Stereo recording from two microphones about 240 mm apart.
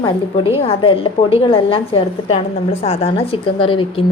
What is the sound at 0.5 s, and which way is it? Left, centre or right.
A woman's voice, left.